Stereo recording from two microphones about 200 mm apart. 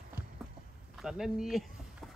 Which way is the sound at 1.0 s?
Centre (ahead or behind).